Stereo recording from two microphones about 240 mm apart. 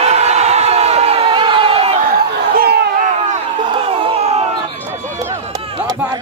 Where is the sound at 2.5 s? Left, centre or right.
Right.